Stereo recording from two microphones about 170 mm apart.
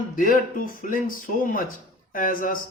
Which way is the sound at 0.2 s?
55° left (ahead or behind).